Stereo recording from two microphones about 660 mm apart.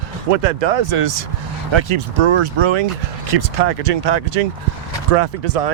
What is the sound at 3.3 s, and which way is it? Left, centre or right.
Speech, right.